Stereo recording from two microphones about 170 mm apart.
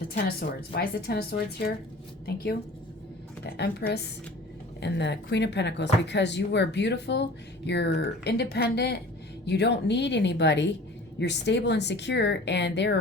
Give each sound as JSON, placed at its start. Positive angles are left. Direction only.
{"t": 0.1, "sound": "speech", "side_deg": 65}
{"t": 4.8, "sound": "speech", "side_deg": 90}
{"t": 9.5, "sound": "speech", "side_deg": 90}